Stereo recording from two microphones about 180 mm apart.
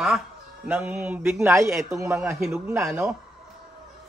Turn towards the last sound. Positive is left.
turn(degrees=-5)  # may be behind; listen again after turning